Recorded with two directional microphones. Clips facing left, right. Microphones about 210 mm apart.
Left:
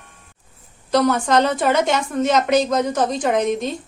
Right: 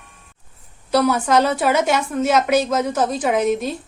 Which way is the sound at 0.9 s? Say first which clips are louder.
Even; 10° right (ahead or behind).